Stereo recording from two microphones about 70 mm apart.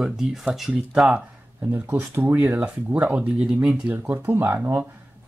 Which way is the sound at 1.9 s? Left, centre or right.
Right.